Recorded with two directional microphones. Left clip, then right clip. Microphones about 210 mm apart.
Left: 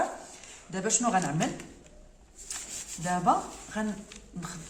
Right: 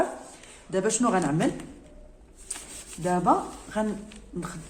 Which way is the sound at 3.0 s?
30° right (ahead or behind).